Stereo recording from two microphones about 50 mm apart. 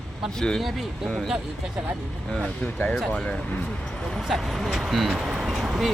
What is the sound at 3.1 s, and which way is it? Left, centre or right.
Speech, left.